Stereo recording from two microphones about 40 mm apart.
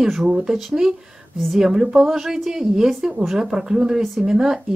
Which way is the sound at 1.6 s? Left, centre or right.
Centre.